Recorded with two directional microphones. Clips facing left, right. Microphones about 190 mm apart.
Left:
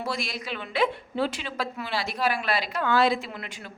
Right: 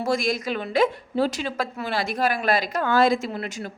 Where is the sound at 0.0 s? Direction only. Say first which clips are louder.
Right 8 dB; 45° right (ahead or behind).